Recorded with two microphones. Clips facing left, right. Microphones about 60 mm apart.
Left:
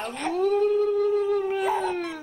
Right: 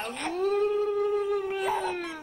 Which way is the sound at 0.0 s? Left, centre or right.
Centre.